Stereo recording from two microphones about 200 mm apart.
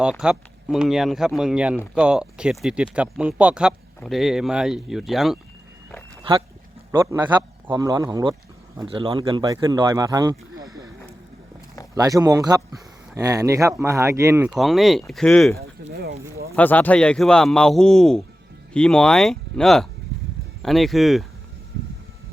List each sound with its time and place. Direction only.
0.0 s speech: 5° right (ahead or behind)
6.3 s a man's voice: 25° right (ahead or behind)
11.9 s speech: 20° right (ahead or behind)
14.5 s speech: centre (ahead or behind)
15.8 s speech: 55° right (ahead or behind)
16.6 s speech: 10° left (ahead or behind)